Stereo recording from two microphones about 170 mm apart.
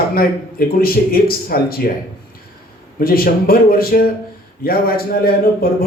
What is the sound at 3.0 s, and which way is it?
A man's voice, 60° left (ahead or behind).